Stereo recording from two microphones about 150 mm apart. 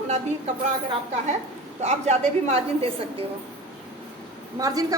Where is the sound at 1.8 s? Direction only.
45° right (ahead or behind).